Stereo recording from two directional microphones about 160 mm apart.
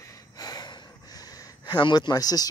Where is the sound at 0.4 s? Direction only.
25° left (ahead or behind).